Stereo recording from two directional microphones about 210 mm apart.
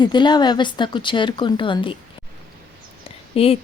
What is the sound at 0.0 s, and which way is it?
A woman's voice, 20° left (ahead or behind).